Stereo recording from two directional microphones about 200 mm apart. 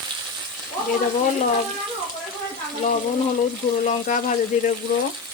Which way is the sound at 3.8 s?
40° left (ahead or behind).